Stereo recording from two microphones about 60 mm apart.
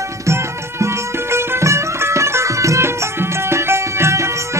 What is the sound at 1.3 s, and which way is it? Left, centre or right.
Music, right.